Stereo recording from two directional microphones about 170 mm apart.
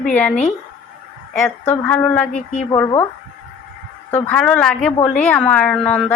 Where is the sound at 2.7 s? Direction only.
20° left (ahead or behind).